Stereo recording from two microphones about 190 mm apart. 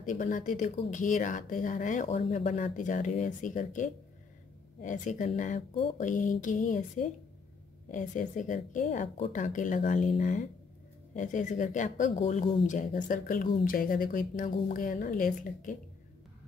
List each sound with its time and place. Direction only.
0.0 s a woman's voice: 40° left (ahead or behind)